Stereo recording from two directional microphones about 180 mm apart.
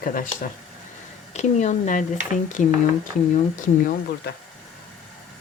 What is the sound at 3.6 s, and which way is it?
Speech, 50° left (ahead or behind).